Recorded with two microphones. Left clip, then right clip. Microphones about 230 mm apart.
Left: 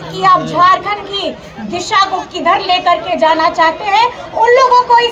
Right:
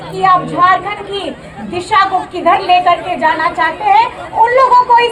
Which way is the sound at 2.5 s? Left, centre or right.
Left.